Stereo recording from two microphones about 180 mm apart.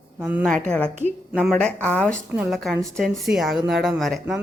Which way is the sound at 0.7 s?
5° left (ahead or behind).